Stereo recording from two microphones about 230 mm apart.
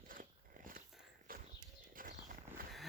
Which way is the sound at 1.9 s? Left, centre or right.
Right.